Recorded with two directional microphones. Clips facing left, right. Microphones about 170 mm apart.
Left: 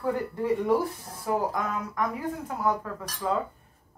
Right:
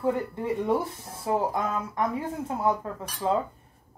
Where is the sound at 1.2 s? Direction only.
25° right (ahead or behind).